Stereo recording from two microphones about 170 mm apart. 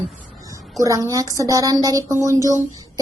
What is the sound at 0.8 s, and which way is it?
Speech, 20° right (ahead or behind).